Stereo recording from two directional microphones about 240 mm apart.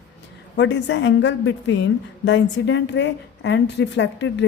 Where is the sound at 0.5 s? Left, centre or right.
Left.